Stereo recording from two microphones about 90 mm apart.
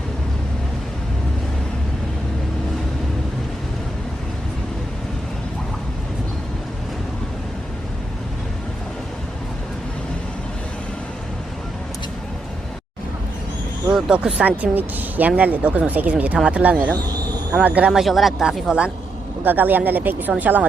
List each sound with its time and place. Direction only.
13.9 s speech: 10° right (ahead or behind)
18.0 s speech: centre (ahead or behind)
19.5 s speech: 20° right (ahead or behind)